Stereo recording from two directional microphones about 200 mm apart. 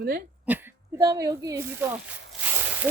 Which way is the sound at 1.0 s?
15° right (ahead or behind).